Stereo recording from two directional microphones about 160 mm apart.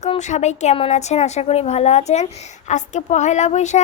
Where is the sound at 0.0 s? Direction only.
45° left (ahead or behind).